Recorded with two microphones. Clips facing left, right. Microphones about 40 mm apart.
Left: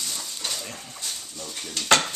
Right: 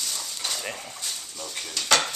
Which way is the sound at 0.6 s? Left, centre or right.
Right.